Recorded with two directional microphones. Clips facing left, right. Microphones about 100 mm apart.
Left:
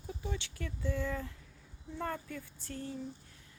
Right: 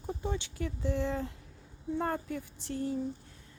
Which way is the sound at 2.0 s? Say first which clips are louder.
Right 4 dB; 35° right (ahead or behind).